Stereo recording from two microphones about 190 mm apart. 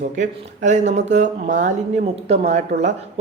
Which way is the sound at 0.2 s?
40° right (ahead or behind).